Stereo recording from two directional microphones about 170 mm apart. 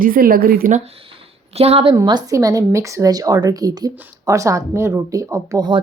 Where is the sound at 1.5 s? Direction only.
35° right (ahead or behind).